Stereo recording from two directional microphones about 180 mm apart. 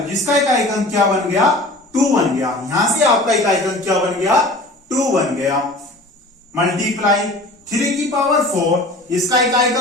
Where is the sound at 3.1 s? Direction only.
Centre (ahead or behind).